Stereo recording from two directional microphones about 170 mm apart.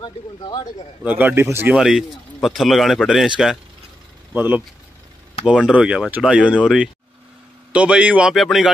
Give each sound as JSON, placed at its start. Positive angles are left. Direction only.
{"t": 0.0, "sound": "speech", "side_deg": 25}
{"t": 1.0, "sound": "speech", "side_deg": -10}
{"t": 1.8, "sound": "speech", "side_deg": 0}
{"t": 5.7, "sound": "speech", "side_deg": -5}